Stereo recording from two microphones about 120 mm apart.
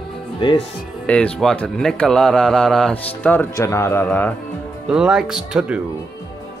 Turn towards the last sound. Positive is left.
turn(degrees=-5)  # may be behind; listen again after turning